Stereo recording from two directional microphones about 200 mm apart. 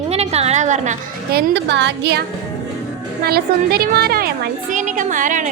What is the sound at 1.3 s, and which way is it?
Speech, 60° right (ahead or behind).